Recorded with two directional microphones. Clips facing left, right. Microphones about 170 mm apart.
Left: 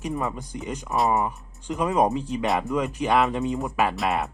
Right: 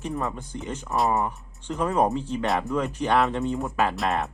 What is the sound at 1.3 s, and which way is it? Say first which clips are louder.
Speech: left 1 dB; 15° left (ahead or behind).